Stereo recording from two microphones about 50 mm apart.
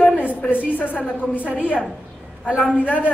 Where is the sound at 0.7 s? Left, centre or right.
Left.